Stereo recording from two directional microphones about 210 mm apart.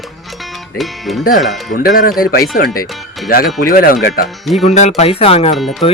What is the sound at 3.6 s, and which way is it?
Speech, 45° left (ahead or behind).